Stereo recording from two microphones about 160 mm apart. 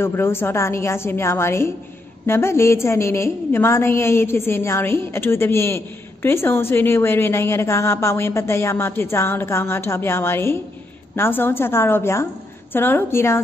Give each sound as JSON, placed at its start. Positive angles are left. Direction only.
{"t": 0.0, "sound": "a woman's voice", "side_deg": 15}